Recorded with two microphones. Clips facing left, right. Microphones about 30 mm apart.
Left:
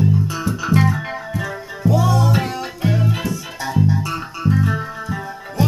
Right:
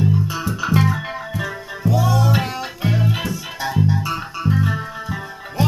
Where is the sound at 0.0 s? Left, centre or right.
Centre.